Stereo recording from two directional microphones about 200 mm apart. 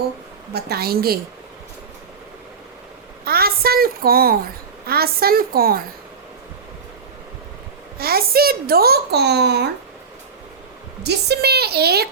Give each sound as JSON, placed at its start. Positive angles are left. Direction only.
{"t": 0.5, "sound": "a woman's voice", "side_deg": -50}
{"t": 3.2, "sound": "a woman's voice", "side_deg": -50}
{"t": 7.9, "sound": "a woman's voice", "side_deg": -50}
{"t": 11.0, "sound": "a woman's voice", "side_deg": -55}